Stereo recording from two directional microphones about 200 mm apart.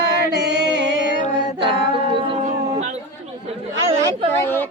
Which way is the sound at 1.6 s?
25° right (ahead or behind).